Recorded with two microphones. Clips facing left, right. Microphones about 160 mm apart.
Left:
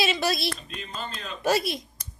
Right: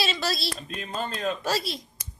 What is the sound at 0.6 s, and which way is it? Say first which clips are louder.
Speech: right 4 dB; 45° right (ahead or behind).